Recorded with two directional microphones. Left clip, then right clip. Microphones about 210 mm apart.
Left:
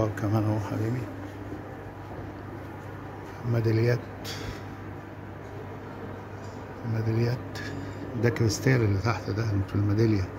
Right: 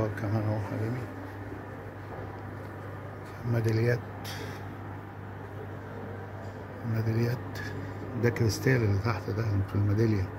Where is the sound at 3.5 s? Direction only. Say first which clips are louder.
Left 2 dB; centre (ahead or behind).